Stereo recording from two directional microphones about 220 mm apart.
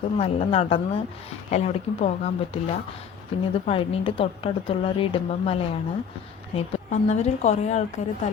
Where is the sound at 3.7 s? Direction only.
25° left (ahead or behind).